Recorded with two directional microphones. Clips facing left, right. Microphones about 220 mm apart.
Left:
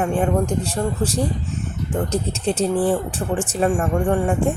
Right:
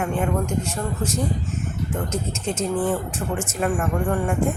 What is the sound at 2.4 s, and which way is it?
Speech, 35° left (ahead or behind).